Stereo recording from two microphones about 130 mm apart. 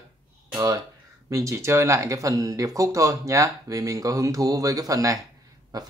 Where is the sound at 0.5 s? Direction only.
30° right (ahead or behind).